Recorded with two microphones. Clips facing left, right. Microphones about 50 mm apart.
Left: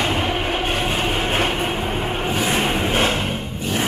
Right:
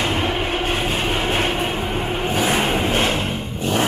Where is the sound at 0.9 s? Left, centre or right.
Centre.